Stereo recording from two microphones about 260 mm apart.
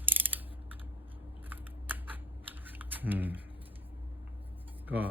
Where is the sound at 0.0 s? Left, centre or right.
Centre.